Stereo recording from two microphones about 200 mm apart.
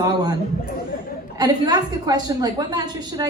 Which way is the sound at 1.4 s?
20° right (ahead or behind).